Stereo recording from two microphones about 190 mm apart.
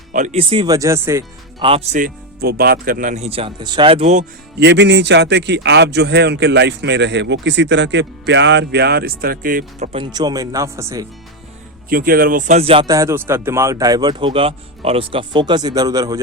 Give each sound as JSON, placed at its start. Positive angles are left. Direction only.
{"t": 0.1, "sound": "speech", "side_deg": -40}
{"t": 1.6, "sound": "speech", "side_deg": -30}
{"t": 4.6, "sound": "a man's voice", "side_deg": -65}
{"t": 9.9, "sound": "speech", "side_deg": -25}
{"t": 11.9, "sound": "speech", "side_deg": -50}
{"t": 12.9, "sound": "speech", "side_deg": -15}